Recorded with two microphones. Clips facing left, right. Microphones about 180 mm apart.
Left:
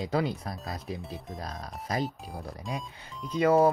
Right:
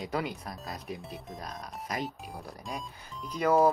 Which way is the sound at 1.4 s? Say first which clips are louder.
Left 3 dB; 30° left (ahead or behind).